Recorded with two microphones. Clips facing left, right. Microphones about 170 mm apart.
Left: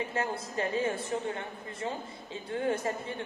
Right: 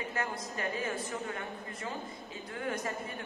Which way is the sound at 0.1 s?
30° left (ahead or behind).